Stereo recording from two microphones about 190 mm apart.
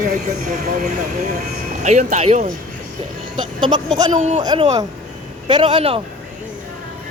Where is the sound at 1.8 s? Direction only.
40° right (ahead or behind).